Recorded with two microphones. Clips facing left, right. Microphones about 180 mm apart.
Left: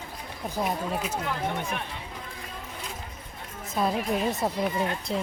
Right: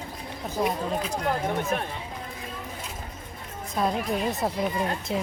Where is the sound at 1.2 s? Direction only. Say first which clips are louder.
Right 4 dB; 45° right (ahead or behind).